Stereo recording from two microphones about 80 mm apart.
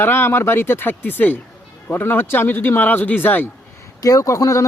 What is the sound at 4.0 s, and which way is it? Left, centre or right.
Speech, left.